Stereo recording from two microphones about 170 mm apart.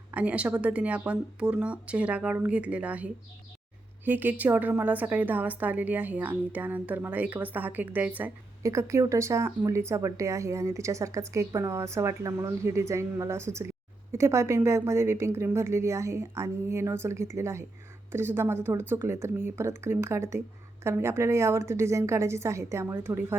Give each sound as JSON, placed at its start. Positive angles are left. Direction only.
{"t": 0.1, "sound": "a woman's voice", "side_deg": -10}